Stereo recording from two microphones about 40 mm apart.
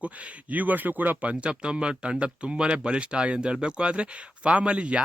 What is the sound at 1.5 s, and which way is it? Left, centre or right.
Speech, right.